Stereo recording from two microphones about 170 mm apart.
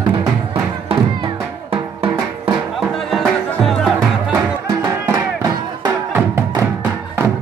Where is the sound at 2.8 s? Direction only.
Centre (ahead or behind).